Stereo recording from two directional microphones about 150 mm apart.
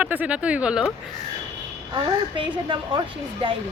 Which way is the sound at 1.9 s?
35° right (ahead or behind).